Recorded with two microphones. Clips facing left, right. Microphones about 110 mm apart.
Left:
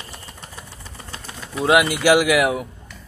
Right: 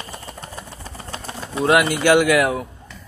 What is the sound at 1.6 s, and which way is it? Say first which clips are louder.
A man's voice: even; 15° left (ahead or behind).